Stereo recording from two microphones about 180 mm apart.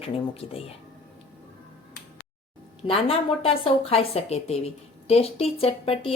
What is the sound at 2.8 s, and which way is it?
A woman's voice, 30° left (ahead or behind).